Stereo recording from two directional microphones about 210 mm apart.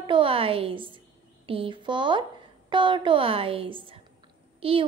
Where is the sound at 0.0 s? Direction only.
25° right (ahead or behind).